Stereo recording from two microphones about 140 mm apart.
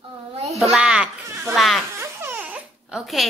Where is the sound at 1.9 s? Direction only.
15° right (ahead or behind).